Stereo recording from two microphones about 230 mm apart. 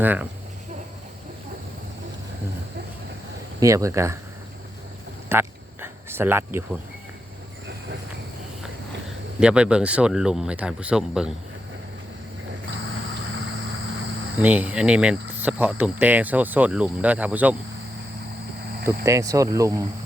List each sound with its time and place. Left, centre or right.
0.0 s speech: centre
3.6 s speech: centre
5.3 s a sound: centre
9.4 s speech: centre
12.9 s vehicle: right
14.4 s speech: centre
19.0 s speech: centre